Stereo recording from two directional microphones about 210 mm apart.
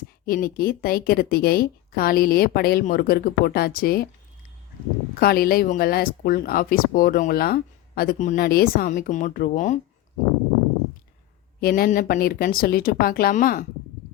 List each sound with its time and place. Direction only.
0.3 s speech: 45° left (ahead or behind)
5.2 s speech: 45° left (ahead or behind)
11.6 s speech: 40° left (ahead or behind)